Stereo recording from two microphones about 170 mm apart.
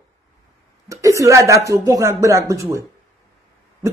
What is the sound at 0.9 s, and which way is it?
Speech, 20° right (ahead or behind).